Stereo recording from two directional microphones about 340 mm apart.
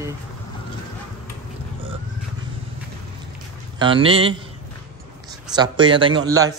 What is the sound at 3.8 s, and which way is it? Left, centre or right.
Speech, centre.